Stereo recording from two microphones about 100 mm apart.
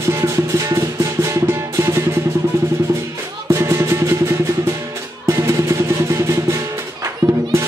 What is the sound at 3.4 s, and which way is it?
Music, 30° right (ahead or behind).